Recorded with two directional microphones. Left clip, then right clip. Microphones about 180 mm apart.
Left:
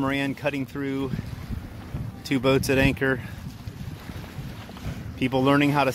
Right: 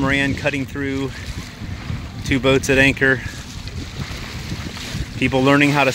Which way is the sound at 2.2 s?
5° left (ahead or behind).